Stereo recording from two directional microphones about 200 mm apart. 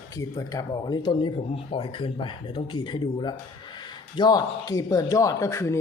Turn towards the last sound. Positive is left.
turn(degrees=15)  # may be behind; listen again after turning